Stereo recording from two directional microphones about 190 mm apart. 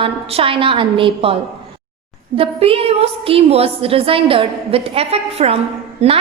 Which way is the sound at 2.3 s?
30° right (ahead or behind).